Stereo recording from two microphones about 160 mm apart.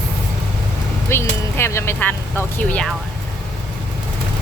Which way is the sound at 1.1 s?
15° left (ahead or behind).